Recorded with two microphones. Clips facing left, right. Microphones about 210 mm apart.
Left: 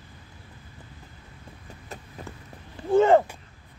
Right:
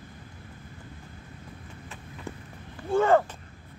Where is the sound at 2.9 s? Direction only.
20° left (ahead or behind).